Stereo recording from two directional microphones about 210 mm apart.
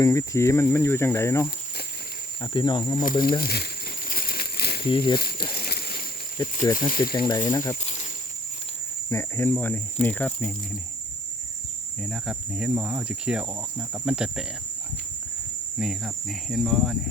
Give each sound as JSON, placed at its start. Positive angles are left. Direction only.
{"t": 0.0, "sound": "speech", "side_deg": 15}
{"t": 3.0, "sound": "speech", "side_deg": 40}
{"t": 4.1, "sound": "crumpling", "side_deg": 45}
{"t": 4.9, "sound": "speech", "side_deg": 25}
{"t": 5.5, "sound": "a sound", "side_deg": 50}
{"t": 6.7, "sound": "speech", "side_deg": 40}
{"t": 7.3, "sound": "speech", "side_deg": 20}
{"t": 9.0, "sound": "speech", "side_deg": 10}
{"t": 12.0, "sound": "cricket", "side_deg": 0}
{"t": 15.8, "sound": "cricket", "side_deg": 0}